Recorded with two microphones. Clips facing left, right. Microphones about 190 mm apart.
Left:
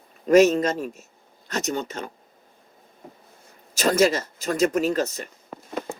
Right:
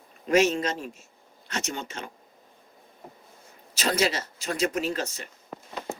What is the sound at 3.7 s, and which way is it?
Speech, 45° left (ahead or behind).